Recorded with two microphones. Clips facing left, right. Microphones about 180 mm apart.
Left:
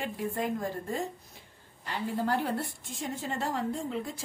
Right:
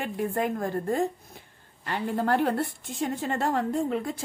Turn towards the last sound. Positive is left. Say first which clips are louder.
# right 6 dB
turn(degrees=-60)  # may be behind; listen again after turning